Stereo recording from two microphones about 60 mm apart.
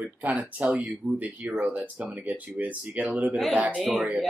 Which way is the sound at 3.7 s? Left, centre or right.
Centre.